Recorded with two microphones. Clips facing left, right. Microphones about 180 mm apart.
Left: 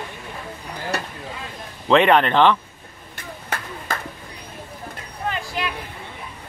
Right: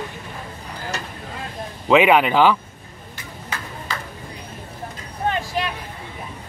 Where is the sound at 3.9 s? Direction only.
50° left (ahead or behind).